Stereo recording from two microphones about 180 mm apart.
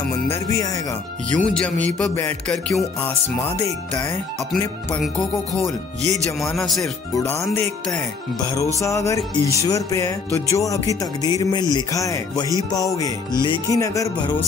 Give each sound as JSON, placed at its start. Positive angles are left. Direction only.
{"t": 0.3, "sound": "music", "side_deg": 20}
{"t": 1.3, "sound": "music", "side_deg": 5}
{"t": 4.5, "sound": "speech", "side_deg": 5}
{"t": 6.4, "sound": "speech", "side_deg": 0}
{"t": 7.2, "sound": "music", "side_deg": 15}
{"t": 8.7, "sound": "music", "side_deg": 15}
{"t": 12.7, "sound": "speech", "side_deg": 20}